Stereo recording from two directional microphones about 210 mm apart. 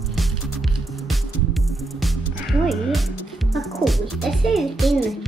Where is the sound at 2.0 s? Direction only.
Centre (ahead or behind).